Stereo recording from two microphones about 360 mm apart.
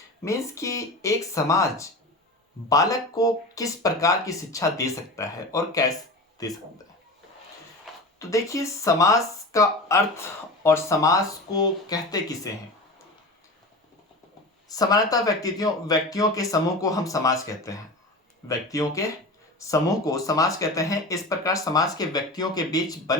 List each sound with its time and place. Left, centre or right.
0.3 s speech: centre
8.2 s speech: centre
14.7 s speech: centre